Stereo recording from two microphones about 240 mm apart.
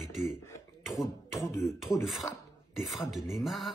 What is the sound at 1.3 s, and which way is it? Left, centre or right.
Speech, centre.